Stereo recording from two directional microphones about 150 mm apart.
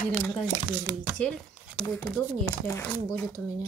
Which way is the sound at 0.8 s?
5° left (ahead or behind).